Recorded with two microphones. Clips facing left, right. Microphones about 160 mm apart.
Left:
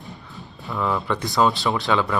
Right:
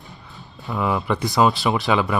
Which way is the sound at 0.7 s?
10° right (ahead or behind).